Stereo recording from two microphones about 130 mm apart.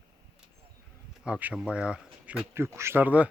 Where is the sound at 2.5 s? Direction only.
20° right (ahead or behind).